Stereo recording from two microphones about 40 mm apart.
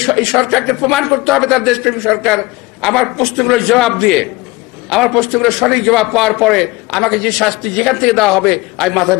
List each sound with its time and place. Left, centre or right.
0.0 s a man's voice: centre